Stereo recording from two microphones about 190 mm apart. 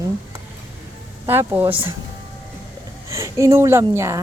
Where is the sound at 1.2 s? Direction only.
10° right (ahead or behind).